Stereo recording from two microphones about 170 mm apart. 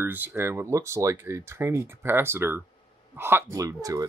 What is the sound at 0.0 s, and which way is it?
Speech, 10° right (ahead or behind).